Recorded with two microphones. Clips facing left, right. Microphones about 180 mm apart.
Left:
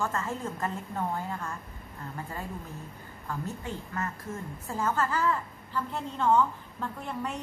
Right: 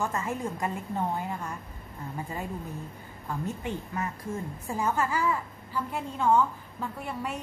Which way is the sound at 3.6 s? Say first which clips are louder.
Right 2 dB; 20° right (ahead or behind).